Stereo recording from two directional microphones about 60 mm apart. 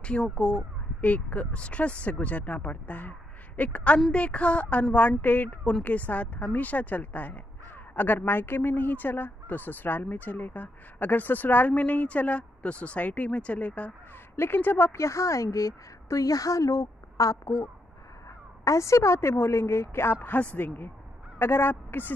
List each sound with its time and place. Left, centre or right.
0.0 s speech: centre
14.3 s speech: left
15.0 s a woman's voice: left